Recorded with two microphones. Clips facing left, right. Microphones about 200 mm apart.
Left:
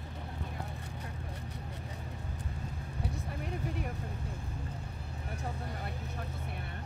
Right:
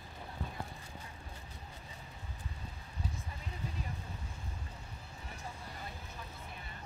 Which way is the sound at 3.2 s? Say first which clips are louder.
Left 7 dB; 65° left (ahead or behind).